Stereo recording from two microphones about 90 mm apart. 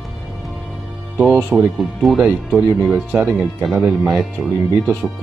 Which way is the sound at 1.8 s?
Centre (ahead or behind).